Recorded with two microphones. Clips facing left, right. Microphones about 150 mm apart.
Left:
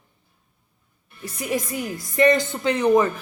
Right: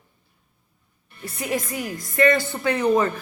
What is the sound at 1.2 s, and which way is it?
A woman's voice, 15° left (ahead or behind).